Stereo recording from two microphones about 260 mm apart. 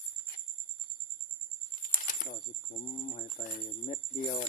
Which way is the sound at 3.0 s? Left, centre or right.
Left.